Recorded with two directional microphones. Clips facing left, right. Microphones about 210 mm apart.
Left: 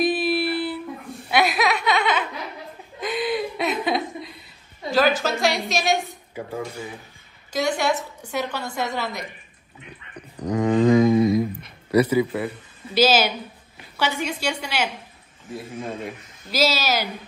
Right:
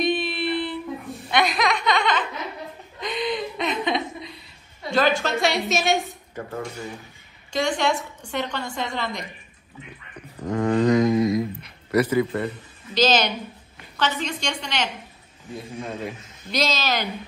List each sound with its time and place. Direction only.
0.0 s a sound: 5° left (ahead or behind)
1.3 s laughter: 5° left (ahead or behind)
3.0 s chuckle: 5° left (ahead or behind)
4.9 s a woman's voice: centre (ahead or behind)
10.4 s a woman's voice: 15° left (ahead or behind)
10.8 s a woman's voice: 5° left (ahead or behind)